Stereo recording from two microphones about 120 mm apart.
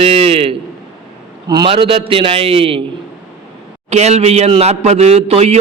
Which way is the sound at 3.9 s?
65° right (ahead or behind).